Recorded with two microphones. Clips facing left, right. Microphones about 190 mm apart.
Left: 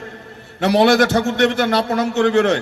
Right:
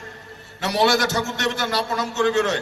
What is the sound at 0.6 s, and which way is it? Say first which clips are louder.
A man's voice: left 7 dB; 55° left (ahead or behind).